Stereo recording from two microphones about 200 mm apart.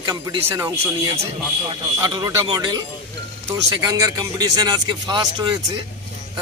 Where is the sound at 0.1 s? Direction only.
15° right (ahead or behind).